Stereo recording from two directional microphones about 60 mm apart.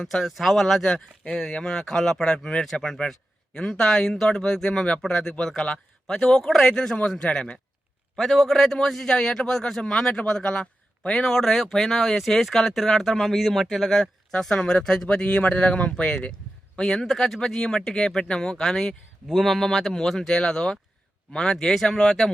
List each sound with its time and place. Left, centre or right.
0.0 s a man's voice: centre
8.1 s a man's voice: centre
11.3 s a man's voice: centre